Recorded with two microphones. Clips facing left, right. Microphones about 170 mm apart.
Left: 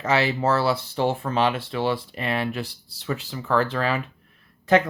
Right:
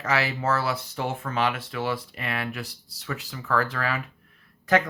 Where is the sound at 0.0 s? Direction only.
25° left (ahead or behind).